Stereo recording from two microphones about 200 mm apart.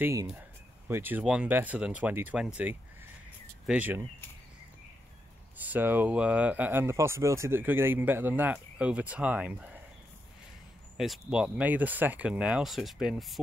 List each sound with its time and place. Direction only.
0.0 s speech: 15° right (ahead or behind)
5.6 s speech: 10° right (ahead or behind)
11.0 s speech: 5° right (ahead or behind)